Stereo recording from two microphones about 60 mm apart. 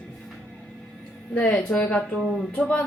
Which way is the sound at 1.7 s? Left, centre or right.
Left.